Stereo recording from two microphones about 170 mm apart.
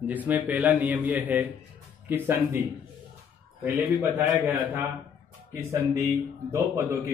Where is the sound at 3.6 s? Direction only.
15° right (ahead or behind).